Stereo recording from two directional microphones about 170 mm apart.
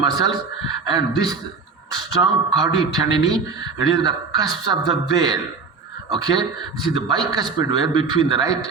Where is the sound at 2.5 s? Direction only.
25° right (ahead or behind).